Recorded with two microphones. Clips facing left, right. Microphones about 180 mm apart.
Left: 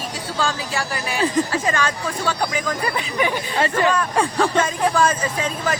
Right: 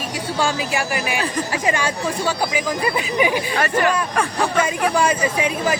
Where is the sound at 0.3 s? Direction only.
15° right (ahead or behind).